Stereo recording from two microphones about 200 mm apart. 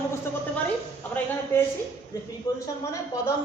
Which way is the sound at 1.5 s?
10° left (ahead or behind).